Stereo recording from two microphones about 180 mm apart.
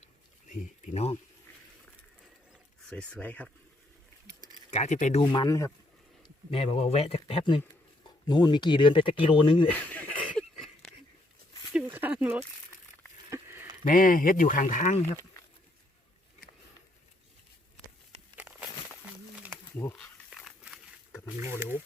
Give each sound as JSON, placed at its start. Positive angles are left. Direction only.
{"t": 0.4, "sound": "speech", "side_deg": 45}
{"t": 2.8, "sound": "speech", "side_deg": 5}
{"t": 4.7, "sound": "speech", "side_deg": 40}
{"t": 5.2, "sound": "speech", "side_deg": 25}
{"t": 6.5, "sound": "speech", "side_deg": 35}
{"t": 9.6, "sound": "a sound", "side_deg": 10}
{"t": 11.9, "sound": "a sound", "side_deg": -10}
{"t": 13.8, "sound": "speech", "side_deg": 50}
{"t": 18.3, "sound": "a sound", "side_deg": -10}
{"t": 19.8, "sound": "snake", "side_deg": 10}
{"t": 21.6, "sound": "speech", "side_deg": -15}